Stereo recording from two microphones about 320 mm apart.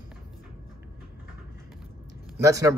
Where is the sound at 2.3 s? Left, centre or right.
Centre.